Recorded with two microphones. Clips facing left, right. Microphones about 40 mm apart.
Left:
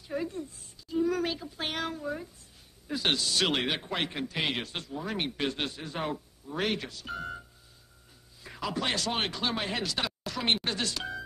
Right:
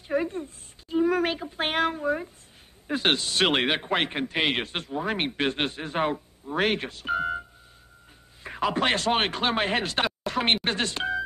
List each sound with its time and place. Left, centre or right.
0.1 s a woman's voice: right
8.5 s speech: right